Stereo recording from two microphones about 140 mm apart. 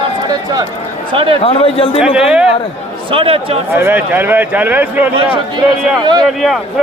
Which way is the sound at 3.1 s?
40° right (ahead or behind).